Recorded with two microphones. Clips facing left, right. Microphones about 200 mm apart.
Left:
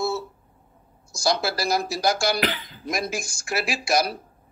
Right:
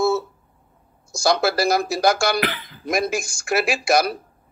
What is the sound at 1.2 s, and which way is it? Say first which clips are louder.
Speech: right 5 dB; 55° right (ahead or behind).